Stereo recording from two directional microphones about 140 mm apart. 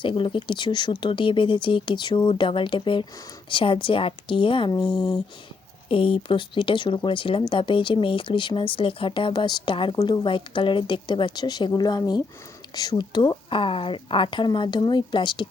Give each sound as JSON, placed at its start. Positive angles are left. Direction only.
{"t": 0.0, "sound": "speech", "side_deg": 35}